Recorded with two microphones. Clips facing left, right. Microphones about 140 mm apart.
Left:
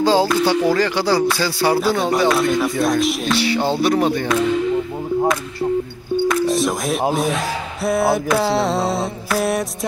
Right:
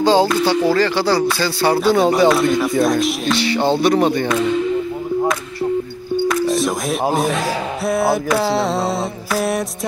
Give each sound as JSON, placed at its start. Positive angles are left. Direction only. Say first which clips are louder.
{"t": 0.0, "sound": "mantra", "louder": "right 1 dB", "side_deg": 5}
{"t": 0.7, "sound": "speech", "louder": "right 1 dB", "side_deg": 15}
{"t": 2.0, "sound": "mantra", "louder": "right 3 dB", "side_deg": 0}
{"t": 3.5, "sound": "speech", "louder": "right 3 dB", "side_deg": -25}
{"t": 3.8, "sound": "mantra", "louder": "right 2 dB", "side_deg": 5}
{"t": 6.2, "sound": "speech", "louder": "even", "side_deg": 0}
{"t": 7.8, "sound": "mantra", "louder": "left 1 dB", "side_deg": 0}